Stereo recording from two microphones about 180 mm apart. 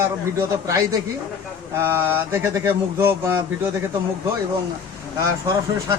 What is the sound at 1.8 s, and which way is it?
Speech, 15° right (ahead or behind).